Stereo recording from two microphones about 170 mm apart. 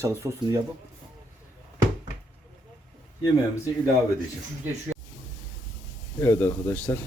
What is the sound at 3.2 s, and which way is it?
Speech, 10° right (ahead or behind).